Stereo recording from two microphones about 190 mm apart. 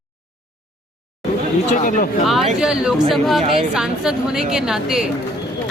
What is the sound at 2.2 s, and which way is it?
Speech, centre (ahead or behind).